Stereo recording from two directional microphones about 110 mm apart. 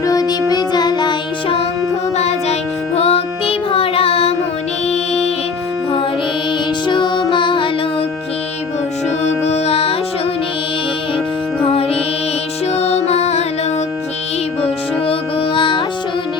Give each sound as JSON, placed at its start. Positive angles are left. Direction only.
{"t": 0.0, "sound": "music", "side_deg": 30}
{"t": 2.1, "sound": "music", "side_deg": 75}
{"t": 4.9, "sound": "music", "side_deg": 75}
{"t": 6.8, "sound": "music", "side_deg": 45}
{"t": 9.5, "sound": "music", "side_deg": 65}
{"t": 11.6, "sound": "music", "side_deg": 65}
{"t": 15.5, "sound": "music", "side_deg": 50}